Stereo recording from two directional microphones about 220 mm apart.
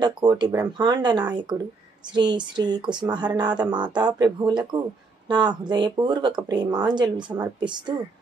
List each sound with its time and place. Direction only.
0.0 s speech: 20° right (ahead or behind)